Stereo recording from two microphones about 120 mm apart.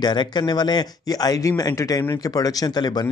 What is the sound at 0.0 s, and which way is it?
Speech, 40° left (ahead or behind).